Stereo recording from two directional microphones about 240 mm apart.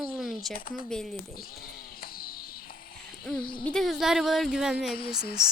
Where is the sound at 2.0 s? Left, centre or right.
Left.